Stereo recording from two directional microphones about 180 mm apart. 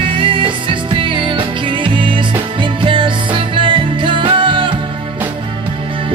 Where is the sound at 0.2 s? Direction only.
30° right (ahead or behind).